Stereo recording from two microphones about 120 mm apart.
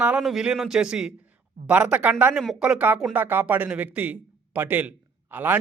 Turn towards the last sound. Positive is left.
turn(degrees=-15)  # may be behind; listen again after turning